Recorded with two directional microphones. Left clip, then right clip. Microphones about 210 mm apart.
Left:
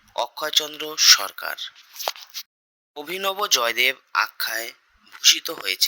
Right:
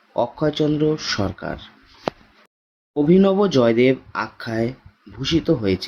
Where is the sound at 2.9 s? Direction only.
45° left (ahead or behind).